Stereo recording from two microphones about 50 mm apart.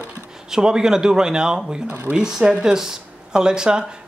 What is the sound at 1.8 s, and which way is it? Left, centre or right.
Speech, right.